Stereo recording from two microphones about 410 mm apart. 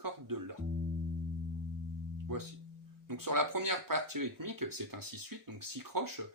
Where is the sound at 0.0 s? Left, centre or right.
Right.